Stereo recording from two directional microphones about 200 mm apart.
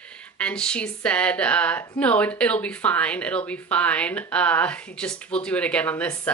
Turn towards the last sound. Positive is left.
turn(degrees=10)  # may be behind; listen again after turning